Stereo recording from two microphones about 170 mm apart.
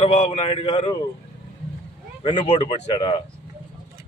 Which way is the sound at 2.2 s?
35° left (ahead or behind).